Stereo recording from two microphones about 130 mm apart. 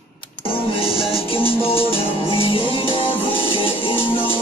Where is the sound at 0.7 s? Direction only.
45° left (ahead or behind).